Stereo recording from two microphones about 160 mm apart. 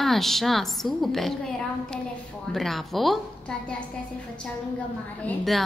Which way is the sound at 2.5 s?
Centre (ahead or behind).